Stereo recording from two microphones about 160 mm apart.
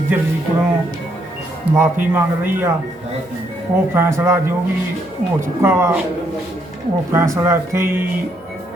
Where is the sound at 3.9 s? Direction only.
15° right (ahead or behind).